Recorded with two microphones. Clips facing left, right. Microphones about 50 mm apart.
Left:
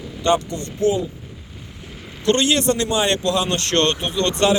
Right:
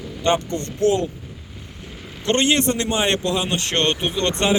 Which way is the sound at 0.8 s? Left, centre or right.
Right.